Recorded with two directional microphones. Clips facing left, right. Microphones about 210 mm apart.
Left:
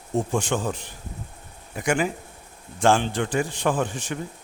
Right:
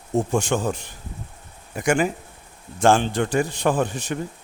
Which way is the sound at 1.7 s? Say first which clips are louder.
Right 3 dB; 45° right (ahead or behind).